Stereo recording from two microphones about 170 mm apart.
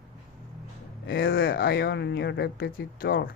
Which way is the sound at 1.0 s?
65° left (ahead or behind).